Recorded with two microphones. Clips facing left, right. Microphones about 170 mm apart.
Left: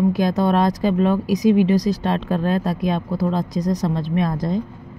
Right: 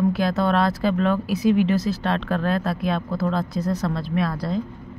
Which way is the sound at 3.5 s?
40° left (ahead or behind).